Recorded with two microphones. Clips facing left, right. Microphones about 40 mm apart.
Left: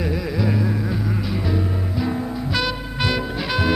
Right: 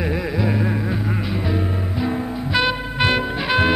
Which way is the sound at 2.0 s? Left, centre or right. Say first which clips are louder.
Right 1 dB; right.